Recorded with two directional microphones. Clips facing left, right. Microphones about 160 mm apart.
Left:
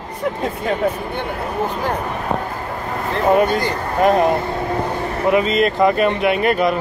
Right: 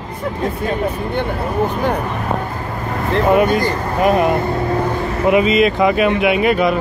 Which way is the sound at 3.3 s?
10° right (ahead or behind).